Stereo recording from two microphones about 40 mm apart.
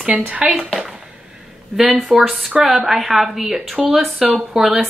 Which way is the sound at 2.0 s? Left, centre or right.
Centre.